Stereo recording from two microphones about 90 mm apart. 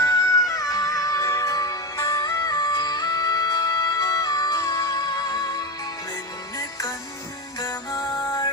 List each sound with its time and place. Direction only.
0.0 s music: 40° left (ahead or behind)
7.6 s music: 45° left (ahead or behind)